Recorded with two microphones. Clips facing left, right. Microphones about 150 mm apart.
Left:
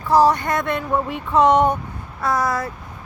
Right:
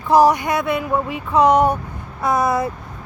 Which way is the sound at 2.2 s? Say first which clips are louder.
Right 3 dB; 20° right (ahead or behind).